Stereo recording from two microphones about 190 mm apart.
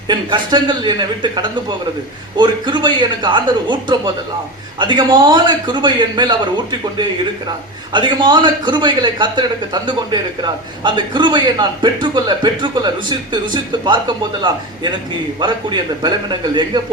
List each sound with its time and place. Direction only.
0.1 s a man's voice: 25° right (ahead or behind)
15.4 s a man's voice: 25° right (ahead or behind)